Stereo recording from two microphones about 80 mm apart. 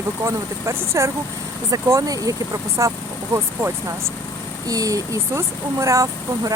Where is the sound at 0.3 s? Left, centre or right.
Right.